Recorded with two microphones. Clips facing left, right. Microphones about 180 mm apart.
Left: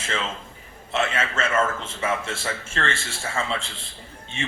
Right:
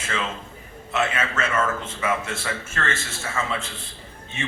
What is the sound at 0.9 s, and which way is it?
A man's voice, 25° left (ahead or behind).